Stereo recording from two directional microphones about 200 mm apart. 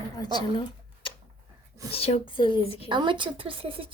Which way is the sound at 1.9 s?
30° left (ahead or behind).